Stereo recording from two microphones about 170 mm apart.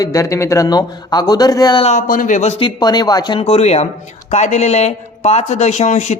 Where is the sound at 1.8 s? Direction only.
45° left (ahead or behind).